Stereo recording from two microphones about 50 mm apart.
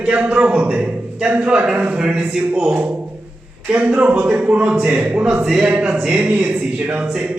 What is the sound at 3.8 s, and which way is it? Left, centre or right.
A man's voice, right.